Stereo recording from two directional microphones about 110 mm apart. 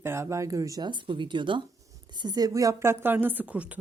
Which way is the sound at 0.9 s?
45° right (ahead or behind).